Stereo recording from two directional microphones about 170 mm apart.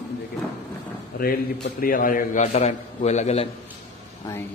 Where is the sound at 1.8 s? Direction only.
55° left (ahead or behind); by 3.5 s 40° left (ahead or behind).